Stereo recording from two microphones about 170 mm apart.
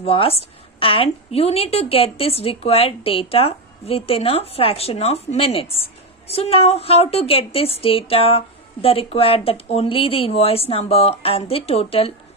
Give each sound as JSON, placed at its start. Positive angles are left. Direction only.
{"t": 0.0, "sound": "a woman's voice", "side_deg": 35}